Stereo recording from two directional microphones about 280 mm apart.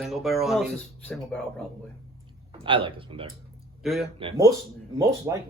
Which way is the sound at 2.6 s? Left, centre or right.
Centre.